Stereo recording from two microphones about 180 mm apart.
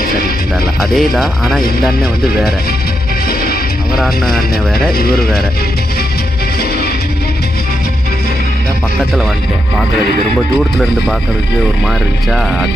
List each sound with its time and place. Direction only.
0.7 s speech: centre (ahead or behind)
3.9 s speech: centre (ahead or behind)
4.4 s speech: 55° left (ahead or behind)
12.3 s speech: centre (ahead or behind)